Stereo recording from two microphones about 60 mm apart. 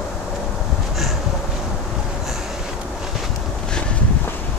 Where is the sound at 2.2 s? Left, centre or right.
Centre.